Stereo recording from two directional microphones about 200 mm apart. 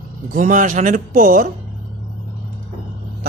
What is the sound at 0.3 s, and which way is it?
Speech, 40° right (ahead or behind).